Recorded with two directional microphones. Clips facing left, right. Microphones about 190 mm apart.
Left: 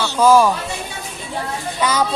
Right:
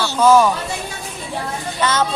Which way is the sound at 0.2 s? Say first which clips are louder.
Even; 10° left (ahead or behind).